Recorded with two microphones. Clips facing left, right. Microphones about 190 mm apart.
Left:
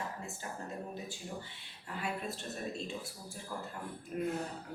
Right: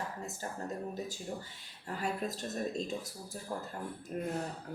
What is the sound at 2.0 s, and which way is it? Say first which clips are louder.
Speech: right 3 dB; 40° right (ahead or behind).